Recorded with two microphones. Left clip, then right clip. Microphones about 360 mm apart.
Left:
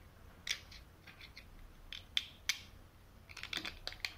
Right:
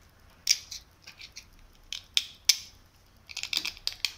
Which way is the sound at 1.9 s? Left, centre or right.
Centre.